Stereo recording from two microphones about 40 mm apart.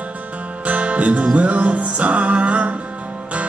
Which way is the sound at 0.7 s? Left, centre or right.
Right.